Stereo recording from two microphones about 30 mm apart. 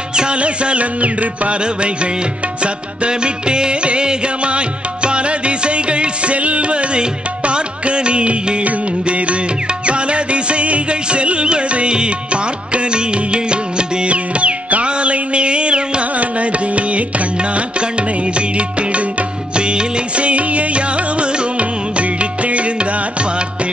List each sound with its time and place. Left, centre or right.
0.1 s music: right
0.4 s music: right
2.6 s music: right
14.0 s music: right
16.2 s music: right
19.5 s music: right